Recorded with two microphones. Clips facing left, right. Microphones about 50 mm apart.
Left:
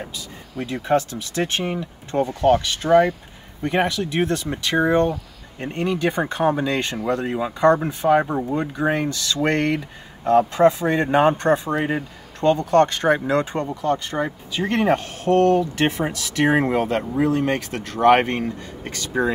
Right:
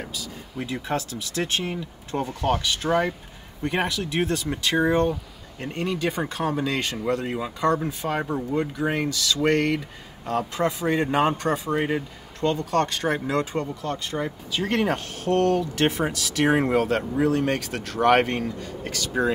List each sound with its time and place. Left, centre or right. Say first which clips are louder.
0.8 s speech: left 8 dB; left
2.8 s speech: left 8 dB; centre
3.8 s speech: left 4 dB; left